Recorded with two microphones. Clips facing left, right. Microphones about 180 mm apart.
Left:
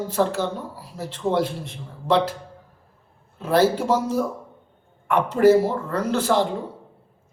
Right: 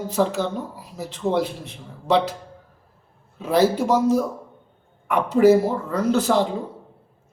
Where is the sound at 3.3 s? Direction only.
10° right (ahead or behind).